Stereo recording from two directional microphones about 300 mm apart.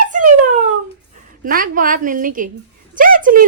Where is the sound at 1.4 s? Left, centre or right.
Right.